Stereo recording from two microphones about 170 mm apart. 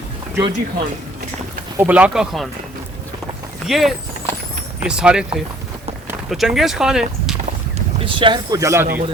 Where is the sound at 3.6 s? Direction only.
Centre (ahead or behind).